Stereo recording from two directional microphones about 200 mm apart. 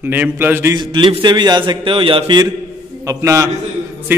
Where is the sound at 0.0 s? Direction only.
10° right (ahead or behind).